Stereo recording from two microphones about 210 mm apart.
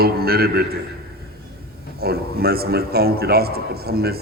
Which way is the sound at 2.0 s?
45° right (ahead or behind).